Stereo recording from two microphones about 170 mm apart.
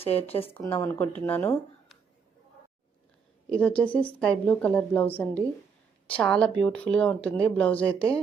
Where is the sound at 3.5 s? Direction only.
10° left (ahead or behind).